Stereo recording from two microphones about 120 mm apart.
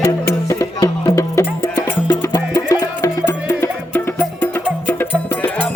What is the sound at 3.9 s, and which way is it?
Music, 10° left (ahead or behind).